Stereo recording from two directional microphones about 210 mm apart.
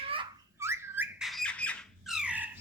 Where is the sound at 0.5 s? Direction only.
10° right (ahead or behind).